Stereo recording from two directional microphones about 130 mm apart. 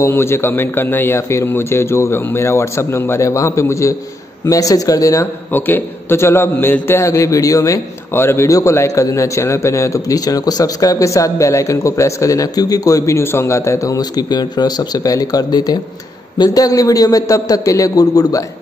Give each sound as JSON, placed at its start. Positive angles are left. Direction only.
{"t": 0.0, "sound": "a man's voice", "side_deg": 20}